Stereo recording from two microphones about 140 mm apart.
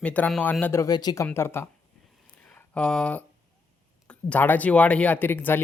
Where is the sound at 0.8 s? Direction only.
30° left (ahead or behind).